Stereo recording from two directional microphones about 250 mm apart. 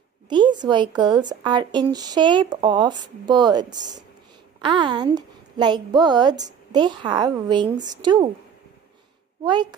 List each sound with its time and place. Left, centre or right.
0.3 s a woman's voice: centre
9.4 s a woman's voice: centre